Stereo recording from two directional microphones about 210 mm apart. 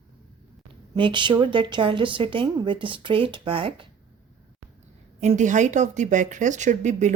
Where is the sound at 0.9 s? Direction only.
20° right (ahead or behind).